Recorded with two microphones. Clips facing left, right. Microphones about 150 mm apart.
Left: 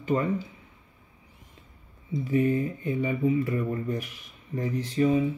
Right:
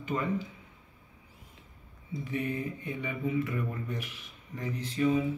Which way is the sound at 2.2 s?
35° left (ahead or behind).